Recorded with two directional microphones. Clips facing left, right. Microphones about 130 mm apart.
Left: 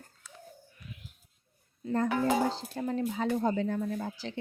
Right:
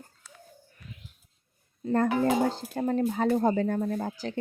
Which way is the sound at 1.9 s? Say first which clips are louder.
Right 3 dB; 60° right (ahead or behind).